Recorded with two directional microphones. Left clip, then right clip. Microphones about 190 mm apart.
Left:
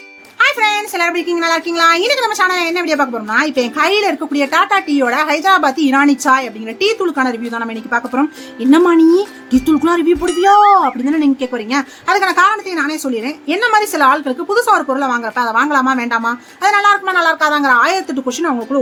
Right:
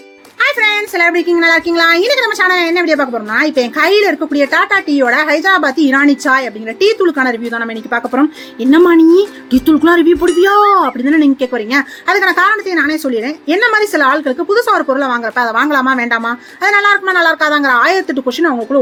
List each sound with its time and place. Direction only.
0.3 s speech: centre (ahead or behind)